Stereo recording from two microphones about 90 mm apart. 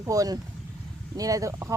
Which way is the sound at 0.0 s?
40° right (ahead or behind).